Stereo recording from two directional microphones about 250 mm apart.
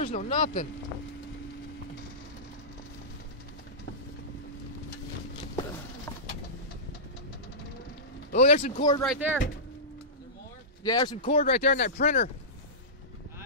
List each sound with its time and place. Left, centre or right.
0.0 s speech: left
8.3 s speech: left
9.0 s speech: centre
10.8 s speech: centre
11.6 s speech: left